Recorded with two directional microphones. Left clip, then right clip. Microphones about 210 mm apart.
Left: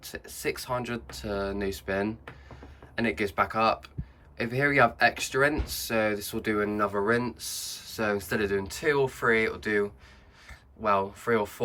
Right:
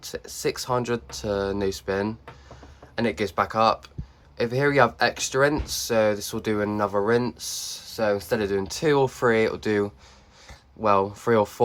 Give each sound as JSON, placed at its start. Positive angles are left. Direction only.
{"t": 0.0, "sound": "speech", "side_deg": -15}